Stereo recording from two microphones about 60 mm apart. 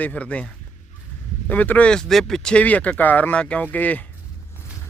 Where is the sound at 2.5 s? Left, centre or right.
Left.